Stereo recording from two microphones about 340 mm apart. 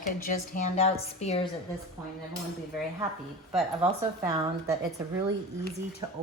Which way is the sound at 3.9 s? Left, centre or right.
Centre.